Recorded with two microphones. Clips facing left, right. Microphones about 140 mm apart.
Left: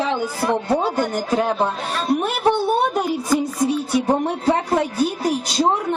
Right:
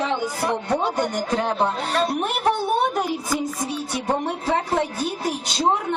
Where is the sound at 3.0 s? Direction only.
Centre (ahead or behind).